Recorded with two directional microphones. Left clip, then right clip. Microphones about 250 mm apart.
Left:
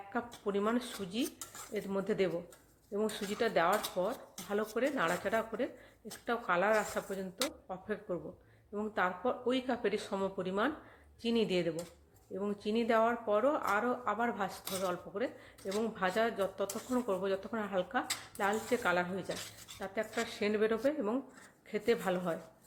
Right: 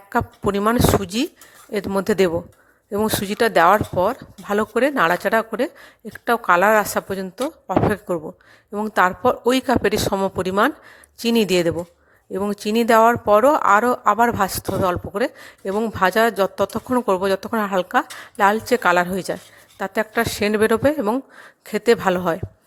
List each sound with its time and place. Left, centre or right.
0.1 s speech: right